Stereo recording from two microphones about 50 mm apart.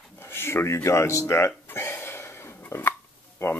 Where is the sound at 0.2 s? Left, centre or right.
Left.